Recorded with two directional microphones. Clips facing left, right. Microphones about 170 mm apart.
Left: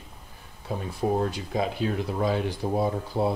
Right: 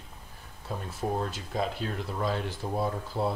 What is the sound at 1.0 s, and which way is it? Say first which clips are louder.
Speech: left 6 dB; 10° left (ahead or behind).